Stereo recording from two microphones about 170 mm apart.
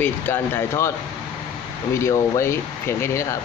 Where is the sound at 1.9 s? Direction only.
15° left (ahead or behind).